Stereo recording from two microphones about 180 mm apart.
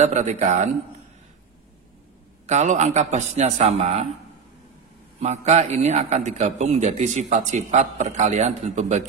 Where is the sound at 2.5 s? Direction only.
40° right (ahead or behind).